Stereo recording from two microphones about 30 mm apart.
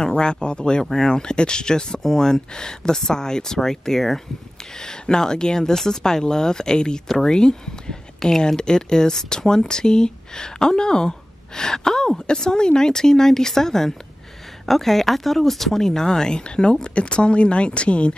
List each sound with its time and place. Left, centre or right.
0.0 s speech: left; by 4.2 s centre
4.7 s speech: left